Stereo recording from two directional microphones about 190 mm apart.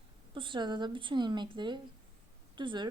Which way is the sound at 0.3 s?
25° right (ahead or behind).